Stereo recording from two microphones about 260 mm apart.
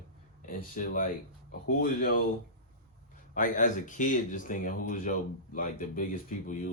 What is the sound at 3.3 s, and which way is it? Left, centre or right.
Speech, left.